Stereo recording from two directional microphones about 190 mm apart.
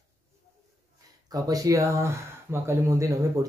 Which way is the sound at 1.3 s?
20° right (ahead or behind).